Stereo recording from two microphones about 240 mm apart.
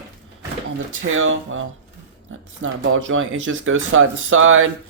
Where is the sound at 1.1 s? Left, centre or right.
Right.